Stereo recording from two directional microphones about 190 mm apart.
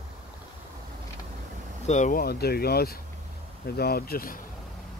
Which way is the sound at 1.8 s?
40° left (ahead or behind).